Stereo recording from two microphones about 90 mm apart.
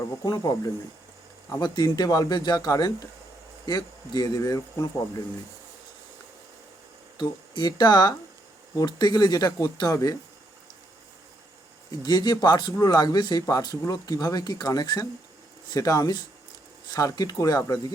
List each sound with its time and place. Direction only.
0.2 s speech: 40° left (ahead or behind)
1.6 s speech: 50° left (ahead or behind)
7.2 s speech: 55° left (ahead or behind)
11.9 s speech: 50° left (ahead or behind)